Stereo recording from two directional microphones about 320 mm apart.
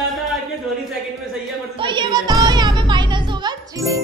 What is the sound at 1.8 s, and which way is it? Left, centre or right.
Music, centre.